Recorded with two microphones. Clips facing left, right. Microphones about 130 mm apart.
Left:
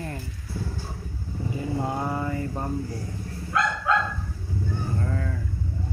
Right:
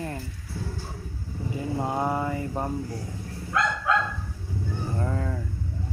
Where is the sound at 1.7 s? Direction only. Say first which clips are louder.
Right 3 dB; 15° right (ahead or behind).